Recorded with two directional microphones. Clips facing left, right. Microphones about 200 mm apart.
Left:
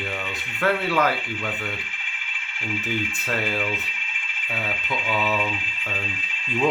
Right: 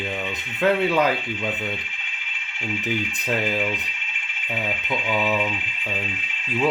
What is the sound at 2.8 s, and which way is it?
Speech, 15° right (ahead or behind).